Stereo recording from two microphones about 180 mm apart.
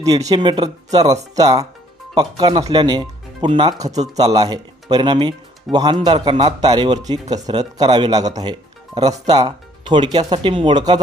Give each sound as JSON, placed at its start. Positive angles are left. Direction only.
{"t": 0.3, "sound": "speech", "side_deg": -25}
{"t": 3.8, "sound": "speech", "side_deg": -40}
{"t": 4.3, "sound": "speech", "side_deg": -20}